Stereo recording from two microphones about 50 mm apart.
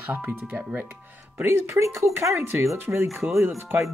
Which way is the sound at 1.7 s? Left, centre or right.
Right.